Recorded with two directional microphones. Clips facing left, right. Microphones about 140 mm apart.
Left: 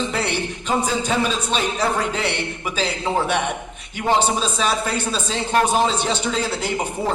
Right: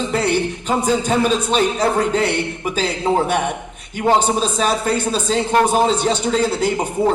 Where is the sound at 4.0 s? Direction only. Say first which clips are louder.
Right 3 dB; 45° right (ahead or behind).